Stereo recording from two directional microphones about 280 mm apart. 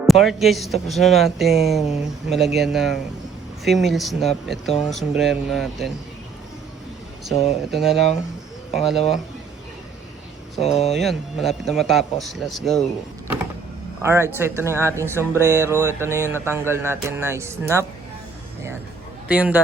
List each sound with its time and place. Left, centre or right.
0.1 s speech: centre
7.7 s speech: centre
10.6 s speech: left
10.9 s speech: centre
14.0 s speech: centre
19.3 s speech: centre